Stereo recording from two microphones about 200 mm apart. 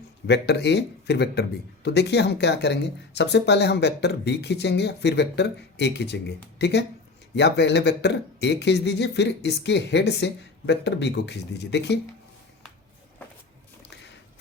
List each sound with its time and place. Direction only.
0.3 s speech: 55° left (ahead or behind)